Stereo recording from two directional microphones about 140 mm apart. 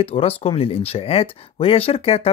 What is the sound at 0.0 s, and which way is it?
Speech, 45° left (ahead or behind).